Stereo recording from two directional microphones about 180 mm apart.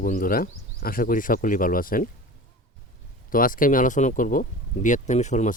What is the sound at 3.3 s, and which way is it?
Speech, 50° left (ahead or behind).